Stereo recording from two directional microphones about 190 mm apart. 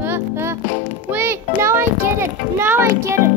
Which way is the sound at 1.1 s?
10° right (ahead or behind).